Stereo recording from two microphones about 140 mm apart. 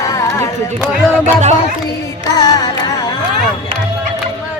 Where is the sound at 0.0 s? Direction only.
25° left (ahead or behind).